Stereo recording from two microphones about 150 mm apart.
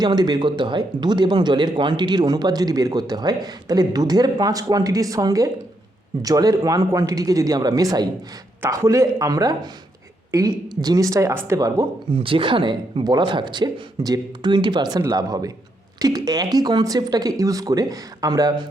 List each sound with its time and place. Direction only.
0.0 s speech: 30° right (ahead or behind)
12.1 s speech: 35° right (ahead or behind)